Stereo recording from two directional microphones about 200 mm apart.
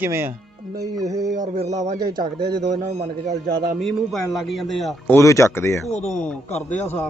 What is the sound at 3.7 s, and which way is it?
Speech, centre (ahead or behind).